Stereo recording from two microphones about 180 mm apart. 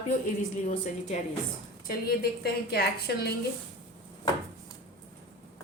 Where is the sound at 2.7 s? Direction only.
60° left (ahead or behind).